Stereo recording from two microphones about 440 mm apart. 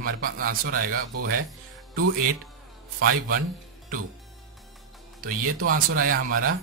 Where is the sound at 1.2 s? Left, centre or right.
Right.